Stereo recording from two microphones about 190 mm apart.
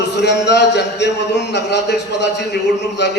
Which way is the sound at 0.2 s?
65° left (ahead or behind).